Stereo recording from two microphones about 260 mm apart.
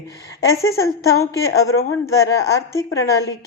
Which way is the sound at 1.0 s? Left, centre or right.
Centre.